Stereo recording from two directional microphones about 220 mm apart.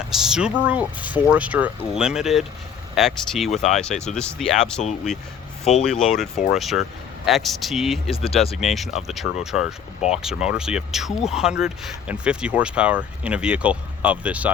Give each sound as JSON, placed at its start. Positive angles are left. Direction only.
{"t": 0.1, "sound": "speech", "side_deg": 0}
{"t": 8.1, "sound": "speech", "side_deg": 25}
{"t": 8.6, "sound": "speech", "side_deg": 0}